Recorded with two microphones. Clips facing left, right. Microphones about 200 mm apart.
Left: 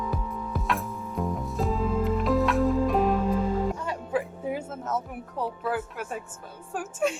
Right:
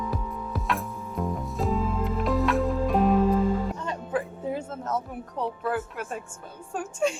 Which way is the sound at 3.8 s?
10° left (ahead or behind).